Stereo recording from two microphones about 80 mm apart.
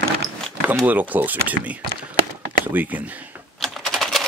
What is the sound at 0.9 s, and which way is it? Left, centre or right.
Speech, right.